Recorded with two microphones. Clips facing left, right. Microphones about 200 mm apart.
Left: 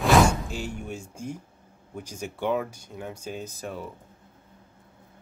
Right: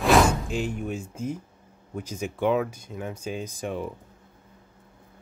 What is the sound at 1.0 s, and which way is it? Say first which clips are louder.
Speech: right 4 dB; 10° left (ahead or behind).